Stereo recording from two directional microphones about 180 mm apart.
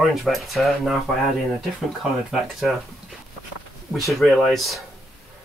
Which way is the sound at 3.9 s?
Centre (ahead or behind).